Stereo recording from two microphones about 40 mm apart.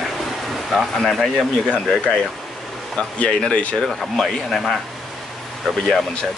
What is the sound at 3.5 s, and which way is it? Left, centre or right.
Speech, left.